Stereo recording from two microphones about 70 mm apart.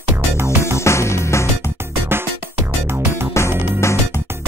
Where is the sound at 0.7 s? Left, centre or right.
Left.